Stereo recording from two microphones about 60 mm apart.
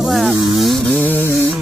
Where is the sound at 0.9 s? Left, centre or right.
Left.